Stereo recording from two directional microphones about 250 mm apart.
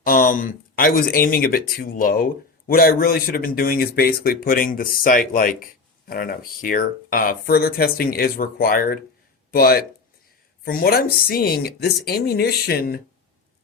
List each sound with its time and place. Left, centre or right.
0.0 s speech: left